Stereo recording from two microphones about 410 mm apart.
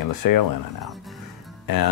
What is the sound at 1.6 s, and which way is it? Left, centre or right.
Speech, left.